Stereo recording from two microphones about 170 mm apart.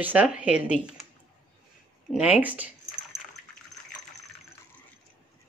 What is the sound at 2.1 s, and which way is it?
Speech, 5° right (ahead or behind).